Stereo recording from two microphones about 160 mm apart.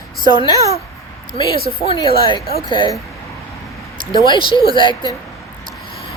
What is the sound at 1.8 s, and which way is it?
Speech, 35° left (ahead or behind).